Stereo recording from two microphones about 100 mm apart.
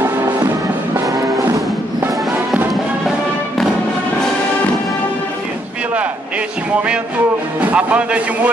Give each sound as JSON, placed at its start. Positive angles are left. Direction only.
{"t": 2.3, "sound": "music", "side_deg": -20}
{"t": 7.7, "sound": "speech", "side_deg": -15}